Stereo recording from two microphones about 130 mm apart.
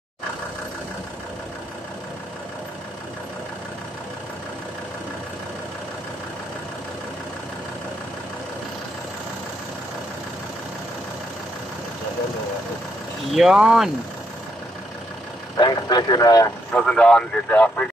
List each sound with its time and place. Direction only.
13.3 s speech: 5° right (ahead or behind)
15.5 s vehicle: 30° left (ahead or behind)
16.7 s speech: 10° left (ahead or behind)